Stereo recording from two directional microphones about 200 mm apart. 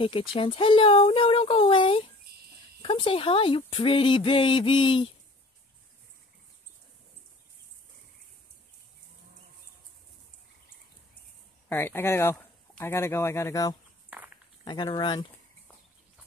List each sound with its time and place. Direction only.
0.0 s speech: 25° left (ahead or behind)
11.7 s speech: 10° left (ahead or behind)